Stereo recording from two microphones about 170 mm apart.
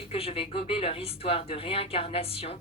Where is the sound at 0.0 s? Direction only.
35° left (ahead or behind).